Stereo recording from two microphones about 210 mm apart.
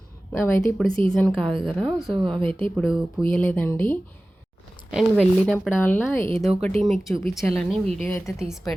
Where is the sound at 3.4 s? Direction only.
10° left (ahead or behind).